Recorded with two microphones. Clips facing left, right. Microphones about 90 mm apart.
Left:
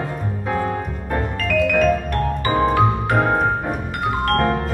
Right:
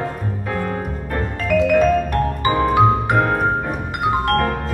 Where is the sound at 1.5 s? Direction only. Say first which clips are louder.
Right 3 dB; 20° right (ahead or behind).